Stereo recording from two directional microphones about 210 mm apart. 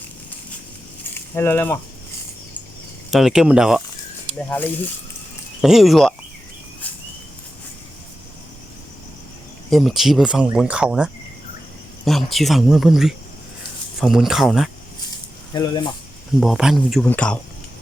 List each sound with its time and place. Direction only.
1.4 s a sound: 10° left (ahead or behind)
3.1 s speech: centre (ahead or behind)
4.4 s a sound: 10° left (ahead or behind)
5.6 s speech: centre (ahead or behind)
6.8 s bird flight: 10° left (ahead or behind)
9.6 s speech: centre (ahead or behind)
15.5 s speech: 20° left (ahead or behind)
16.4 s speech: centre (ahead or behind)